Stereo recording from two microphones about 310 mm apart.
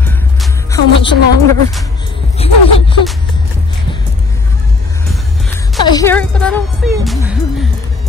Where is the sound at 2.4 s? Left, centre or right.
Centre.